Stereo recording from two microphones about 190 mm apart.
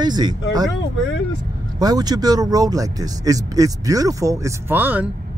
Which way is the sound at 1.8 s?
20° right (ahead or behind).